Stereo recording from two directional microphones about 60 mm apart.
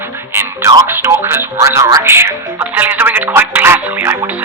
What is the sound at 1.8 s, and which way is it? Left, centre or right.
Speech, right.